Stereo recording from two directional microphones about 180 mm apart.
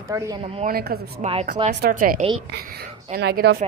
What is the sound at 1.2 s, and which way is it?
Speech, 40° right (ahead or behind).